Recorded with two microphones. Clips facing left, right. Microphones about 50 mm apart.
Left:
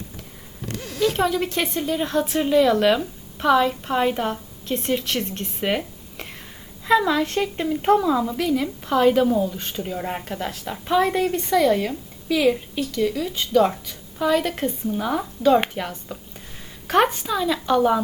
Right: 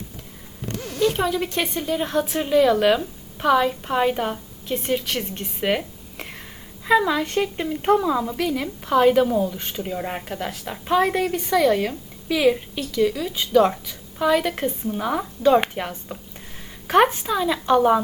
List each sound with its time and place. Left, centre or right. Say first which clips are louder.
0.9 s a woman's voice: even; centre
11.3 s speech: even; centre
12.4 s a woman's voice: right 1 dB; centre
13.0 s a woman's voice: right 3 dB; centre